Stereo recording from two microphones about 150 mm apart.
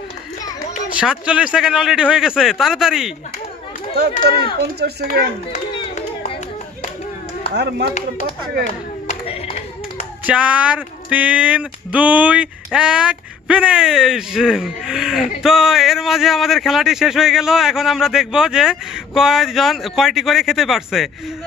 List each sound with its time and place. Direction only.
0.9 s speech: 5° right (ahead or behind)
4.6 s speech: 90° right
7.5 s speech: 90° right
9.0 s clapping: 40° left (ahead or behind)
10.2 s speech: 10° right (ahead or behind)